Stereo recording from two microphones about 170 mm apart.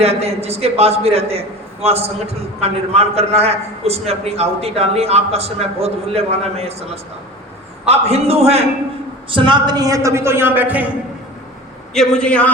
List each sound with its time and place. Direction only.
0.0 s a man's voice: 35° right (ahead or behind)
9.3 s a man's voice: 25° right (ahead or behind); by 10.9 s 10° right (ahead or behind)
11.9 s a man's voice: 5° left (ahead or behind)